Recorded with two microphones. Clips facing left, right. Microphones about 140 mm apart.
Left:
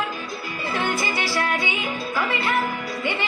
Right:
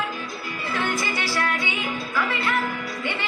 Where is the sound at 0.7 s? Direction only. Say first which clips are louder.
Left 1 dB; 25° left (ahead or behind).